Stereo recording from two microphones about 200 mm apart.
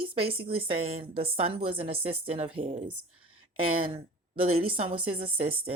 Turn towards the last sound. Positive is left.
turn(degrees=-30)  # may be behind; listen again after turning